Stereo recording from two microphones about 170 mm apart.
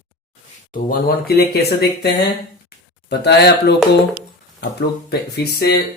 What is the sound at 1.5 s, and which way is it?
Speech, 75° left (ahead or behind).